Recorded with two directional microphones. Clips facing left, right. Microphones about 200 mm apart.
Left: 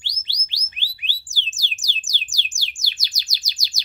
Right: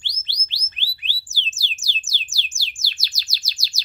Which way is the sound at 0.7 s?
15° left (ahead or behind).